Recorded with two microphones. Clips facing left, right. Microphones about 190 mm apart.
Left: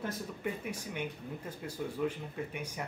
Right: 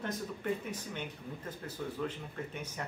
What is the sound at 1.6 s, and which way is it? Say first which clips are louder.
Speech: left 3 dB; 10° left (ahead or behind).